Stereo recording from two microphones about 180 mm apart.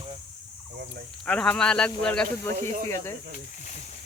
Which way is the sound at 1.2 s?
5° left (ahead or behind).